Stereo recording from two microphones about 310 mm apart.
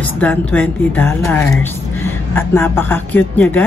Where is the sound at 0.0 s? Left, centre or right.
Centre.